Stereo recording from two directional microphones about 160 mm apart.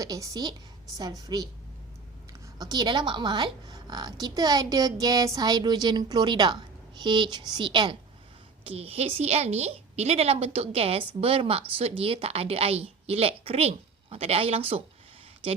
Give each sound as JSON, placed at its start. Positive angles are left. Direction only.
{"t": 0.0, "sound": "a woman's voice", "side_deg": -20}
{"t": 2.6, "sound": "a woman's voice", "side_deg": -25}